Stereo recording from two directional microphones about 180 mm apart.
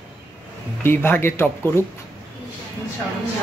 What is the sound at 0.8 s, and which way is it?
Speech, 10° left (ahead or behind).